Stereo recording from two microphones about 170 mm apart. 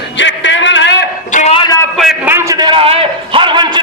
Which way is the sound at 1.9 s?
Centre (ahead or behind).